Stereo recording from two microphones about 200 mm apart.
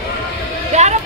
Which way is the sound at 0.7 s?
35° right (ahead or behind).